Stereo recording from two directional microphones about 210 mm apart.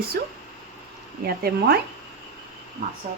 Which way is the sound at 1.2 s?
45° right (ahead or behind).